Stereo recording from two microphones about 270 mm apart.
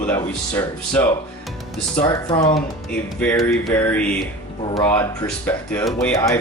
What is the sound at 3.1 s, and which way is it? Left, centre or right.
Speech, centre.